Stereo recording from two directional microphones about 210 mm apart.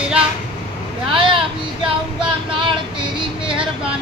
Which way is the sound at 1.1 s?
25° right (ahead or behind).